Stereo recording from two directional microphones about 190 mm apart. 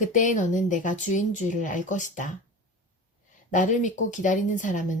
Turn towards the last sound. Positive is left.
turn(degrees=40)  # may be behind; listen again after turning